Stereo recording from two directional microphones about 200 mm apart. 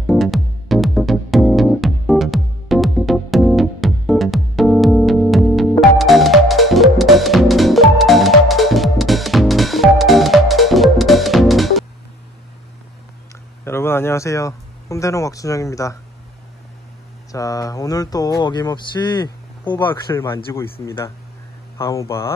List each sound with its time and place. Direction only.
0.0 s music: centre (ahead or behind)
13.7 s speech: 10° left (ahead or behind)
17.3 s speech: 15° left (ahead or behind)